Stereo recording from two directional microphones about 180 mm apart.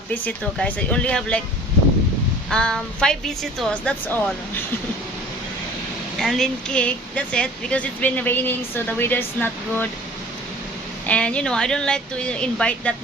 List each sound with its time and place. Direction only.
0.1 s speech: 5° left (ahead or behind)
2.5 s speech: 5° left (ahead or behind)
6.1 s speech: centre (ahead or behind)
11.0 s speech: 5° left (ahead or behind)